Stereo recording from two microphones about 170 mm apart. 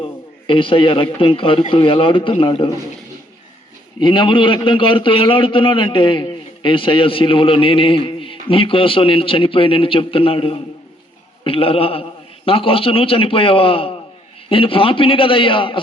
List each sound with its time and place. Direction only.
0.0 s a man's voice: 30° left (ahead or behind)
4.0 s a man's voice: 30° left (ahead or behind)